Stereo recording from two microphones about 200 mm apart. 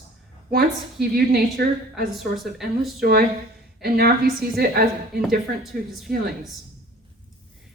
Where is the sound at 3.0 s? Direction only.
50° right (ahead or behind).